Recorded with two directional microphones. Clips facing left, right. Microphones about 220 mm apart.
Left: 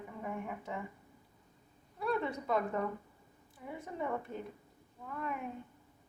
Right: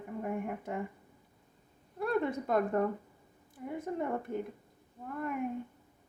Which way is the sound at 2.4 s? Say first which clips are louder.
Right 4 dB; 50° right (ahead or behind).